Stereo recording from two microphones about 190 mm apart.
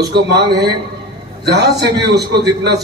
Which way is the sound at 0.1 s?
60° right (ahead or behind).